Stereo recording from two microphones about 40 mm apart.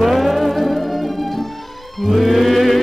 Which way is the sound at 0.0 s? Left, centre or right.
Centre.